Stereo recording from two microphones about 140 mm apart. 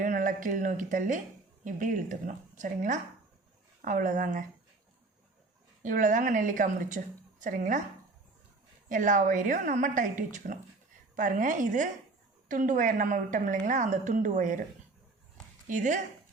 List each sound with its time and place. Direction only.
0.0 s a woman's voice: 70° right (ahead or behind)
5.8 s a woman's voice: 70° right (ahead or behind)
8.9 s a woman's voice: 65° right (ahead or behind)
15.6 s a woman's voice: 65° right (ahead or behind)